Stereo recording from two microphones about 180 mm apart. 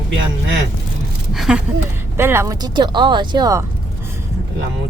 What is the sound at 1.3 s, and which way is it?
Speech, 5° right (ahead or behind).